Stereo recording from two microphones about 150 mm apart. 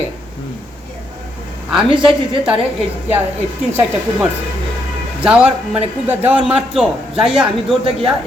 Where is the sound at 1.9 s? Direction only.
35° right (ahead or behind).